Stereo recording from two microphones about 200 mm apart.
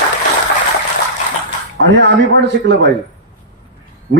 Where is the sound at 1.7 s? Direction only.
60° right (ahead or behind).